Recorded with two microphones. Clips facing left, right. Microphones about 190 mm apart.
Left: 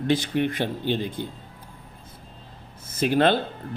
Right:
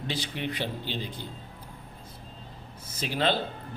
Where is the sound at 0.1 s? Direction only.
50° left (ahead or behind).